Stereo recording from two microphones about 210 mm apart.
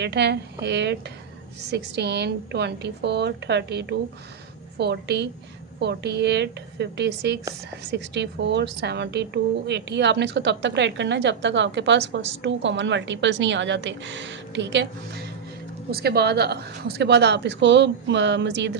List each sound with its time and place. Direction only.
0.0 s a woman's voice: 55° right (ahead or behind)